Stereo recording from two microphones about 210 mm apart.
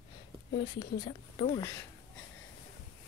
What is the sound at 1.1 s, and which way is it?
Speech, 40° left (ahead or behind).